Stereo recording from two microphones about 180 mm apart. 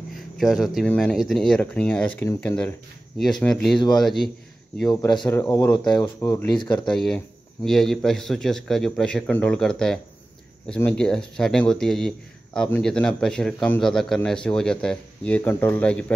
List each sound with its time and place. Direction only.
0.4 s a man's voice: centre (ahead or behind)
2.2 s speech: 20° left (ahead or behind)
3.2 s a man's voice: 5° left (ahead or behind)
5.2 s speech: 15° left (ahead or behind)
6.9 s a man's voice: 5° left (ahead or behind)